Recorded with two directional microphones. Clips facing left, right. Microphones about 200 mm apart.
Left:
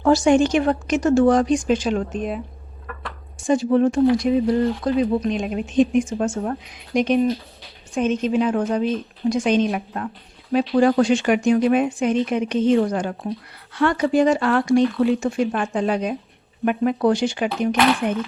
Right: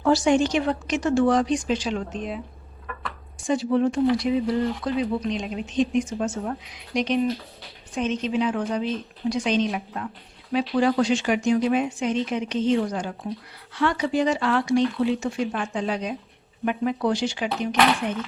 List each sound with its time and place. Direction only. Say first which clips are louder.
0.0 s speech: left 4 dB; 50° left (ahead or behind)
3.4 s speech: left 4 dB; 45° left (ahead or behind)